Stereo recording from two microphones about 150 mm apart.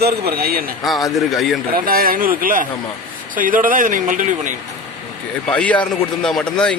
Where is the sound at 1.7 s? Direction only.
75° right (ahead or behind); by 4.5 s 60° right (ahead or behind).